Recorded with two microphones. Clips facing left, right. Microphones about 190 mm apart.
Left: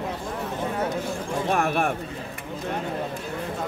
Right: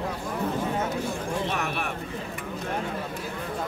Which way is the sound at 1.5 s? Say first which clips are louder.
Left 7 dB; 45° left (ahead or behind).